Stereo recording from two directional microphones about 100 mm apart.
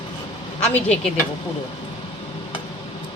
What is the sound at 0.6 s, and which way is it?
Speech, 10° left (ahead or behind).